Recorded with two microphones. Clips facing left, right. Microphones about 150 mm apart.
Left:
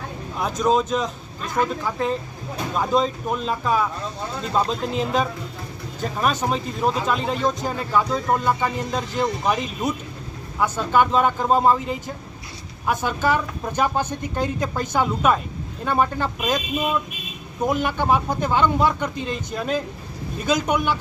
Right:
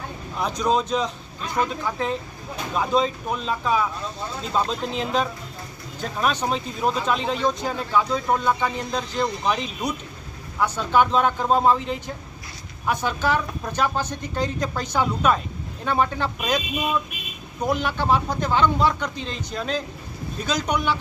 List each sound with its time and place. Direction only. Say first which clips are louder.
0.6 s speech: left 2 dB; centre (ahead or behind)
14.0 s speech: left 3 dB; 55° left (ahead or behind)
14.3 s speech: left 1 dB; 5° left (ahead or behind)
17.8 s speech: left 1 dB; 15° left (ahead or behind)